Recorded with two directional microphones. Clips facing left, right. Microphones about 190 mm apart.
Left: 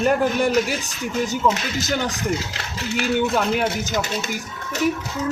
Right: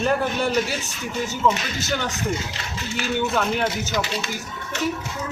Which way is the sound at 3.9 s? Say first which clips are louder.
Left 1 dB; 45° left (ahead or behind).